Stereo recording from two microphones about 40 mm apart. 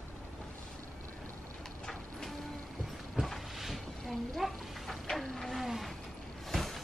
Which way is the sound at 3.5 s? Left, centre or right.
Centre.